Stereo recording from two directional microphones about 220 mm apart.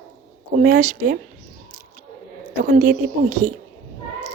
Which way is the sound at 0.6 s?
40° right (ahead or behind).